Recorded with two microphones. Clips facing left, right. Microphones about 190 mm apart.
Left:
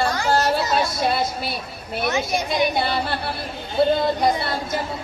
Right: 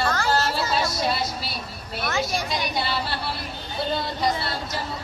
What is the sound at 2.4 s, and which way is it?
Speech, 55° left (ahead or behind).